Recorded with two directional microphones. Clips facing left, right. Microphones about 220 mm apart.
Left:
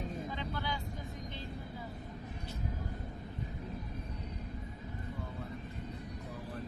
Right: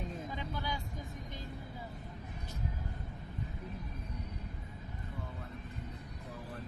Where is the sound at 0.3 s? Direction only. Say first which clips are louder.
Left 1 dB; 10° right (ahead or behind).